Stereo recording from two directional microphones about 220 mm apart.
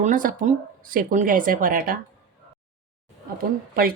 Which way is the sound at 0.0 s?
35° right (ahead or behind).